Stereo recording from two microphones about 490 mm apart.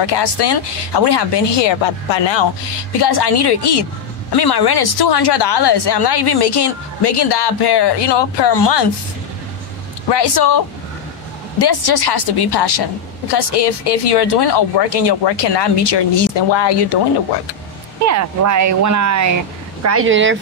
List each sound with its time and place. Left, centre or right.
0.0 s speech: left
3.0 s a woman's voice: left
10.1 s a woman's voice: left
11.6 s a woman's voice: left
18.0 s speech: right